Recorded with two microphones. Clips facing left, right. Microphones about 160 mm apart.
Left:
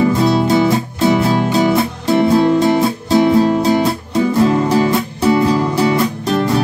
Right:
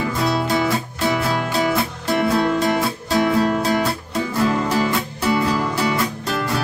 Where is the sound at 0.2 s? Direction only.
25° left (ahead or behind).